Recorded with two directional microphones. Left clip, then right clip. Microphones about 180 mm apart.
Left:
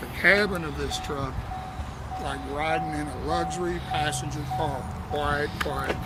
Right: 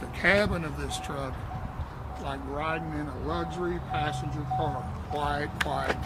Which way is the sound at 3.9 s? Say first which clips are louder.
Left 4 dB; 25° right (ahead or behind).